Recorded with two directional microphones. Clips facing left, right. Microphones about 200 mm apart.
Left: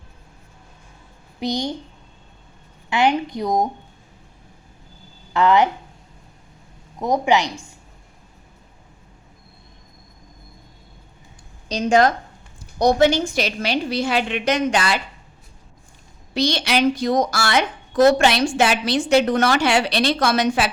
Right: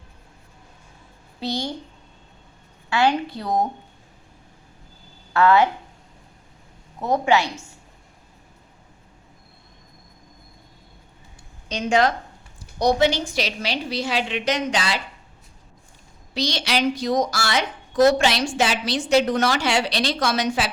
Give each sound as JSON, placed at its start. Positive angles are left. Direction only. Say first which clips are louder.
{"t": 1.4, "sound": "speech", "louder": "left 3 dB", "side_deg": 15}
{"t": 2.9, "sound": "speech", "louder": "left 2 dB", "side_deg": 15}
{"t": 5.3, "sound": "speech", "louder": "even", "side_deg": 15}
{"t": 7.0, "sound": "speech", "louder": "left 1 dB", "side_deg": 15}
{"t": 11.7, "sound": "a woman's voice", "louder": "left 3 dB", "side_deg": 40}
{"t": 16.3, "sound": "a woman's voice", "louder": "left 4 dB", "side_deg": 55}